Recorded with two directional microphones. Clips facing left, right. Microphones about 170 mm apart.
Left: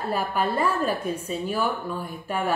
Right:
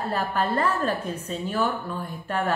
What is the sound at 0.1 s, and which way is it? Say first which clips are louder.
Speech: left 1 dB; 10° left (ahead or behind).